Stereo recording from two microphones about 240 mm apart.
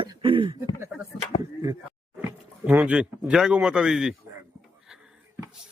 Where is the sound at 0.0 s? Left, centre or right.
Right.